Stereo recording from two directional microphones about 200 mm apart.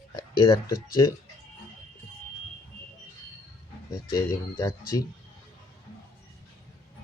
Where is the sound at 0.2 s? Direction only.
25° left (ahead or behind).